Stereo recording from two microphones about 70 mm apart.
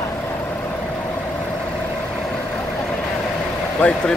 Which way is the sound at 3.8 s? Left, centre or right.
Centre.